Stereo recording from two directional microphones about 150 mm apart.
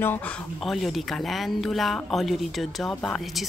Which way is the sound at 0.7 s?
Centre (ahead or behind).